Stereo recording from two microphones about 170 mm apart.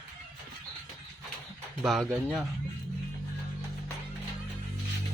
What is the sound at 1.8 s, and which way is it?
Speech, centre (ahead or behind).